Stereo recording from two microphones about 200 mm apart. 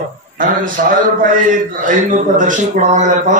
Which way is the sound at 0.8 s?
45° right (ahead or behind).